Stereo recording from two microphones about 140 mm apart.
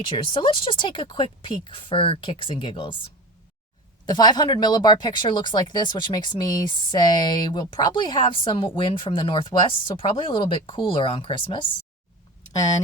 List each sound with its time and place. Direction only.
0.0 s speech: 40° left (ahead or behind)
4.0 s speech: 30° left (ahead or behind)